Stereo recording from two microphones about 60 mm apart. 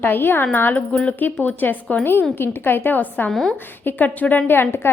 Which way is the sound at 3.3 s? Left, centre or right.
Centre.